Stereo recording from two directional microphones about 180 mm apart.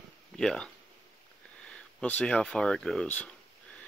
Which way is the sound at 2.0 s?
5° left (ahead or behind).